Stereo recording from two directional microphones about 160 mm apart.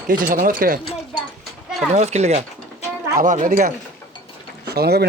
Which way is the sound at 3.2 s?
55° right (ahead or behind).